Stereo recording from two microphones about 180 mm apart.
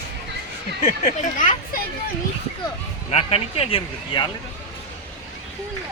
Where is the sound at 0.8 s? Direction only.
45° left (ahead or behind).